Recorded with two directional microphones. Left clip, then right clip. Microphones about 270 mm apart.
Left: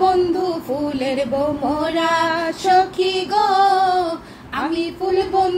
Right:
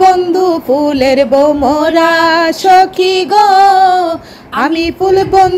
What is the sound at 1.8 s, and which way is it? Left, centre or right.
Music, centre.